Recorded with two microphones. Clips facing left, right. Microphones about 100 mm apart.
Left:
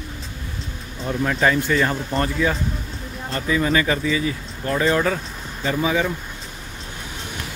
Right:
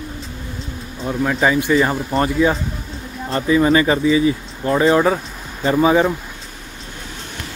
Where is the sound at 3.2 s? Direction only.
30° right (ahead or behind).